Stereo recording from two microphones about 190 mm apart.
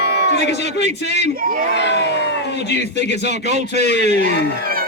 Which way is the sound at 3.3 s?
35° right (ahead or behind).